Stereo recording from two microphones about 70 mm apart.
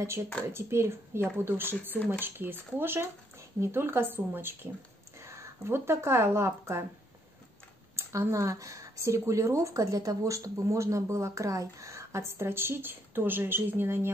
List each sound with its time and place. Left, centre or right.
0.0 s speech: right
5.2 s speech: right
7.9 s speech: right